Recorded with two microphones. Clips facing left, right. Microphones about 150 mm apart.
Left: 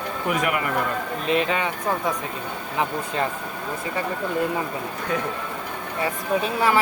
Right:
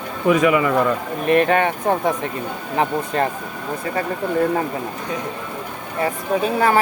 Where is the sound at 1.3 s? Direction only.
60° right (ahead or behind).